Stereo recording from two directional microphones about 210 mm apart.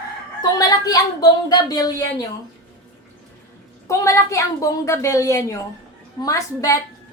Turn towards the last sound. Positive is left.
turn(degrees=15)  # may be behind; listen again after turning